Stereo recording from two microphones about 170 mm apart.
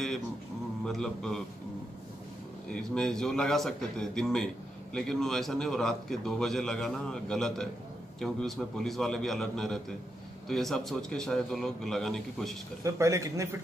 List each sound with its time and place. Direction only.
0.8 s a man's voice: 5° left (ahead or behind)
2.7 s a man's voice: 5° left (ahead or behind)
12.8 s a man's voice: 20° right (ahead or behind)